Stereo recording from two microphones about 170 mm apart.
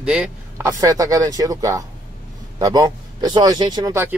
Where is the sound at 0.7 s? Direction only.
20° right (ahead or behind).